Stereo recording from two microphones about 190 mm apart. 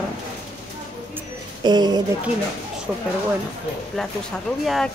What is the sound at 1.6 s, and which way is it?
Speech, 25° right (ahead or behind).